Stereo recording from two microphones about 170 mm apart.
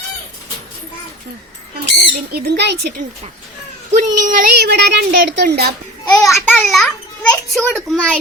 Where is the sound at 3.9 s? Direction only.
50° right (ahead or behind); by 5.7 s 70° right (ahead or behind).